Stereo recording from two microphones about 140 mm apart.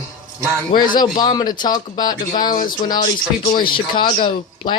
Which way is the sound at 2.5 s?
75° left (ahead or behind).